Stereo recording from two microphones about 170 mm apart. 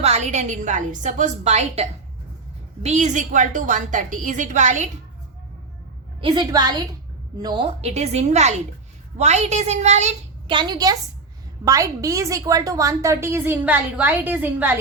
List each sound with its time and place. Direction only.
0.0 s a woman's voice: 40° right (ahead or behind)
6.2 s a woman's voice: 25° right (ahead or behind); by 10.1 s 40° right (ahead or behind)
10.4 s a woman's voice: 25° right (ahead or behind); by 14.8 s 10° right (ahead or behind)